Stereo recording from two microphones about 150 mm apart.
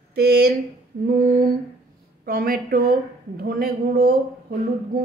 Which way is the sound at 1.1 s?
80° right.